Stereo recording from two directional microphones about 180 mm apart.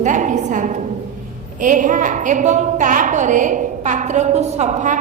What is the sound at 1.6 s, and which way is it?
A woman's voice, 45° right (ahead or behind).